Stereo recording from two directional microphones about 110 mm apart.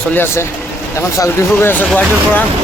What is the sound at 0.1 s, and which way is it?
Speech, 20° left (ahead or behind).